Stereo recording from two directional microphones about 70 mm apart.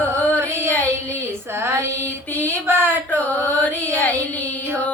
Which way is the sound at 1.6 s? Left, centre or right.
Right.